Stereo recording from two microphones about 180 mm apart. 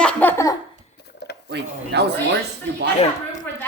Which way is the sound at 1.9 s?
70° right (ahead or behind).